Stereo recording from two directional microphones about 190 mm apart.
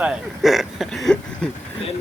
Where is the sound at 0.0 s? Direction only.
5° right (ahead or behind).